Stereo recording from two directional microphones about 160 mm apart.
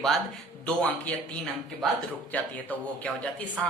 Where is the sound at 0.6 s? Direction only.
5° left (ahead or behind).